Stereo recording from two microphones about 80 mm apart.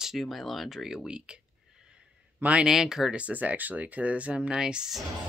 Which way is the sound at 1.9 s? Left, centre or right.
Centre.